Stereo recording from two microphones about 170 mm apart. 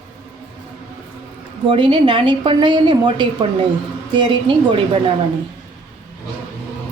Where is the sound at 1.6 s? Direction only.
30° right (ahead or behind).